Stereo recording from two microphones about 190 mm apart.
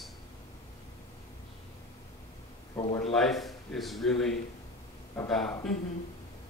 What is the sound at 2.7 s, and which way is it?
Speech, 20° left (ahead or behind).